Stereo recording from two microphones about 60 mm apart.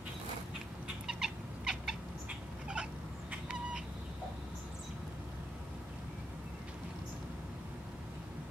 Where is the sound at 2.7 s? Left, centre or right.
Centre.